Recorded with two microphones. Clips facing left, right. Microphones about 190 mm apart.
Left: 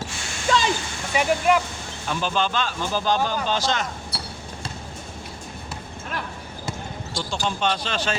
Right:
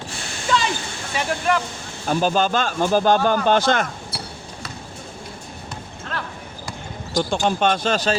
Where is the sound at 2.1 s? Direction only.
40° right (ahead or behind).